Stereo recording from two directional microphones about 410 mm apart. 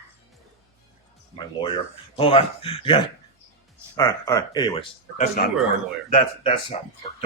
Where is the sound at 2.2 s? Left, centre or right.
Centre.